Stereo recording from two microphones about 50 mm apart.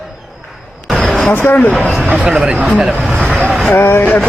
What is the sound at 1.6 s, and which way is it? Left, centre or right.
Speech, left.